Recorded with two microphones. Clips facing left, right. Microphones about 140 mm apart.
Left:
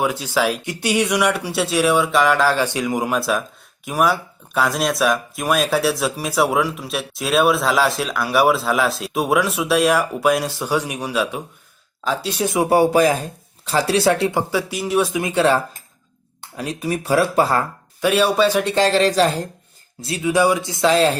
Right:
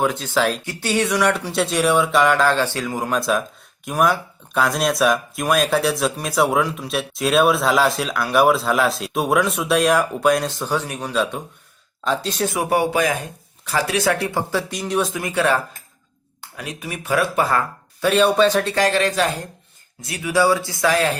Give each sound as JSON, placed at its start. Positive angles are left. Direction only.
{"t": 0.0, "sound": "speech", "side_deg": 10}
{"t": 2.6, "sound": "speech", "side_deg": 15}
{"t": 12.7, "sound": "speech", "side_deg": 35}
{"t": 14.7, "sound": "speech", "side_deg": 5}
{"t": 18.0, "sound": "speech", "side_deg": 10}
{"t": 18.7, "sound": "speech", "side_deg": 30}